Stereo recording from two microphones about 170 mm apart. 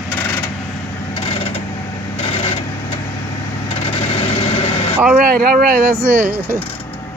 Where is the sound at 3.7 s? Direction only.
35° left (ahead or behind).